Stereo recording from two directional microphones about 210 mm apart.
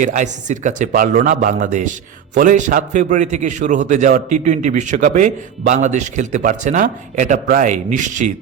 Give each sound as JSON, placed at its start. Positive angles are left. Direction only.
{"t": 0.0, "sound": "a man's voice", "side_deg": -35}